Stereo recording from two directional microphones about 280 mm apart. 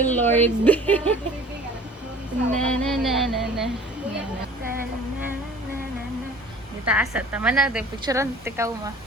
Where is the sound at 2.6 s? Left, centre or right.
Centre.